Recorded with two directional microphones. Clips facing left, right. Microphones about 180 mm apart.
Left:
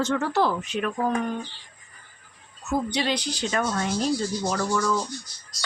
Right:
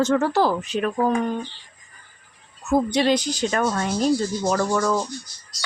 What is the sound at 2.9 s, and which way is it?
Speech, 45° right (ahead or behind).